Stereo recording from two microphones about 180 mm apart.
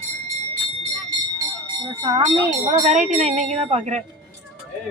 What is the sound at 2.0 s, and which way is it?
Speech, 20° right (ahead or behind).